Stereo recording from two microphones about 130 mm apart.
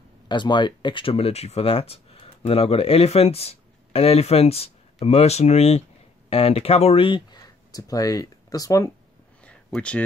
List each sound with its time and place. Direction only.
0.3 s speech: 35° left (ahead or behind)
9.8 s speech: 10° left (ahead or behind)